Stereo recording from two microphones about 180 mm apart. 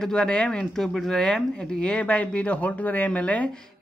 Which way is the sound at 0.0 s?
5° left (ahead or behind).